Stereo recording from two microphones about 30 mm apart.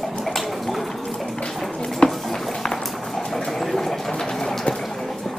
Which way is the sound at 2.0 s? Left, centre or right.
Left.